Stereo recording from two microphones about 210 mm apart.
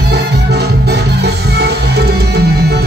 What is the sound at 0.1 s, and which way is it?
Music, 50° right (ahead or behind).